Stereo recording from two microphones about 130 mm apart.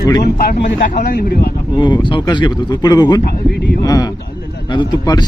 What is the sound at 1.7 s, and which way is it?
Speech, 35° left (ahead or behind).